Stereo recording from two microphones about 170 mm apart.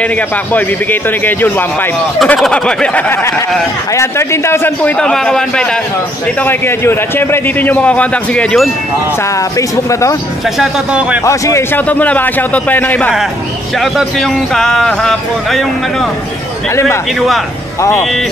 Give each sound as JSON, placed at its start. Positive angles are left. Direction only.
{"t": 0.0, "sound": "a man's voice", "side_deg": 10}
{"t": 9.6, "sound": "speech", "side_deg": 20}
{"t": 10.6, "sound": "speech", "side_deg": -5}
{"t": 11.2, "sound": "a man's voice", "side_deg": 15}